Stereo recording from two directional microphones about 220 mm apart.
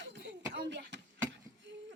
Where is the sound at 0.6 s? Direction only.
50° right (ahead or behind).